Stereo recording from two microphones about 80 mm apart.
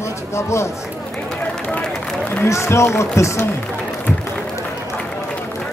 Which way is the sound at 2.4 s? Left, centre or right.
Left.